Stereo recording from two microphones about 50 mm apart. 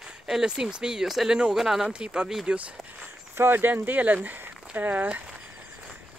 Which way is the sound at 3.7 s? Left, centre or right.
Right.